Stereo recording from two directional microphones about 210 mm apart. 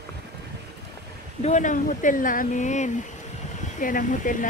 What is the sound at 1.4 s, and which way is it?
Speech, 35° left (ahead or behind).